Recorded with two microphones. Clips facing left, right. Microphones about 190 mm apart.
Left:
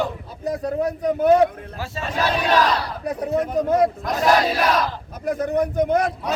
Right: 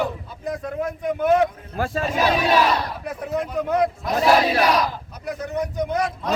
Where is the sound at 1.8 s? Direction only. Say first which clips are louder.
Right 8 dB; 55° right (ahead or behind).